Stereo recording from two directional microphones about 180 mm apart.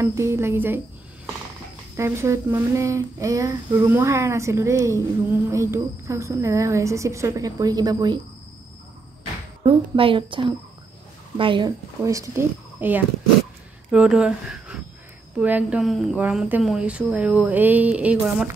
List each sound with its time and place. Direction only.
0.0 s speech: 15° right (ahead or behind)
2.0 s speech: 15° right (ahead or behind)
9.6 s a woman's voice: 30° right (ahead or behind); by 18.5 s 5° right (ahead or behind)